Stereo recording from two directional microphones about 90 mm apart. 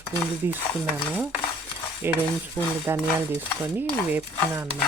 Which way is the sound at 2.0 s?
25° right (ahead or behind).